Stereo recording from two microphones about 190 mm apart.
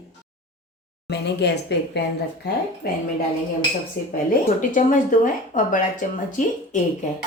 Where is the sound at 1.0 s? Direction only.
60° left (ahead or behind).